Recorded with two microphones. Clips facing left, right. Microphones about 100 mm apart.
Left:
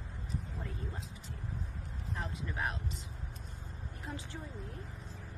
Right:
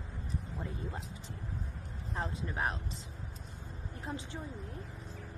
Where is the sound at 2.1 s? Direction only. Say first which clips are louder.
Right 3 dB; 30° right (ahead or behind).